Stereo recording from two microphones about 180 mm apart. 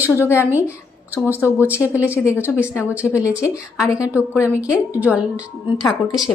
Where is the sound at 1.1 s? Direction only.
10° right (ahead or behind).